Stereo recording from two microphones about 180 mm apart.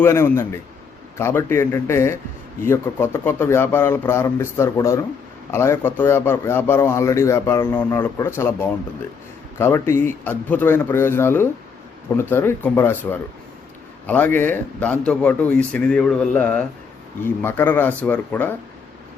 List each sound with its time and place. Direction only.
0.0 s a man's voice: 15° left (ahead or behind)
14.3 s a man's voice: 10° left (ahead or behind)